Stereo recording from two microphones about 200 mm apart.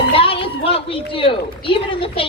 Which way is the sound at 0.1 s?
25° left (ahead or behind).